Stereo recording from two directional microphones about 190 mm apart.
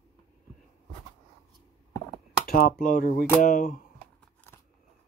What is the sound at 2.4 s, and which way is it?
Speech, 50° left (ahead or behind).